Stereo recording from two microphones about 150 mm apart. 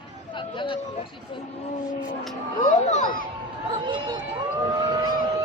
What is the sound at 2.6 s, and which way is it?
Music, 50° left (ahead or behind).